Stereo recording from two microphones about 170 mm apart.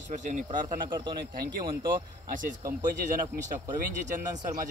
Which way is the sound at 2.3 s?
50° right (ahead or behind).